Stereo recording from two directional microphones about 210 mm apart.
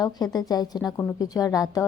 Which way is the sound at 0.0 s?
20° left (ahead or behind).